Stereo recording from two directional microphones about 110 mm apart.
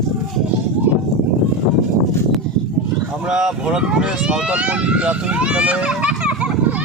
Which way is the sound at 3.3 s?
5° right (ahead or behind).